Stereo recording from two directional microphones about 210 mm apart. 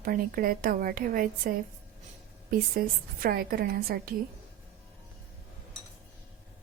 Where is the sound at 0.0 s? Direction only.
45° right (ahead or behind).